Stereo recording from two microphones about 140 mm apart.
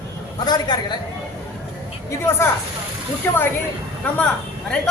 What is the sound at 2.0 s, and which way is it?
Speech, 15° left (ahead or behind).